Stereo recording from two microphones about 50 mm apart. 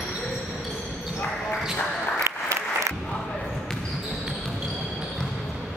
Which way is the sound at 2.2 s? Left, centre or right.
Right.